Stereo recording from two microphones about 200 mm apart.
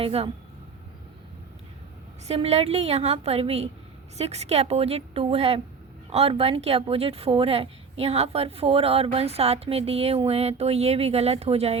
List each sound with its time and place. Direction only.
0.0 s a woman's voice: 30° right (ahead or behind)
2.2 s a woman's voice: 30° right (ahead or behind)